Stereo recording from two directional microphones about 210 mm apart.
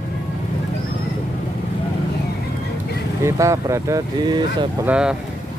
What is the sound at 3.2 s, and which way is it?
Speech, 15° right (ahead or behind).